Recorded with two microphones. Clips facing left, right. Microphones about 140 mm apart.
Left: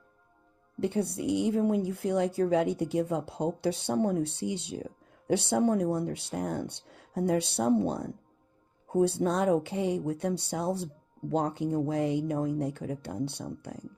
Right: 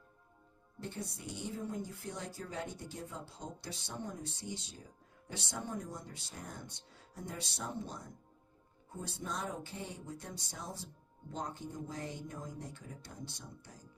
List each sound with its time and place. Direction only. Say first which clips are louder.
0.8 s speech: left 15 dB; 65° left (ahead or behind)